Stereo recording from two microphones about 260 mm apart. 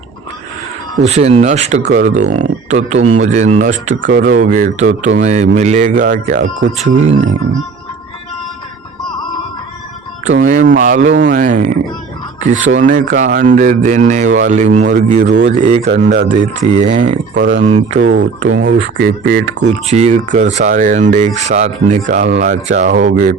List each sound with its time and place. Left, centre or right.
1.0 s speech: right
10.2 s speech: right
18.0 s speech: right